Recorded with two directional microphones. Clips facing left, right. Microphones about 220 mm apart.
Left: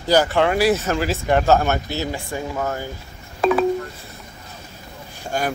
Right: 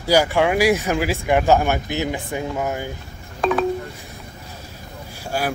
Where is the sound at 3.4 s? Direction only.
5° left (ahead or behind).